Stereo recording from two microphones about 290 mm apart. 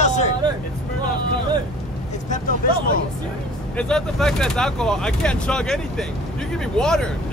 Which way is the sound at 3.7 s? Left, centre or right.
Centre.